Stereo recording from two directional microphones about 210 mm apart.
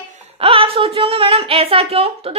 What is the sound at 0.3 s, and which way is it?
A woman's voice, 25° right (ahead or behind).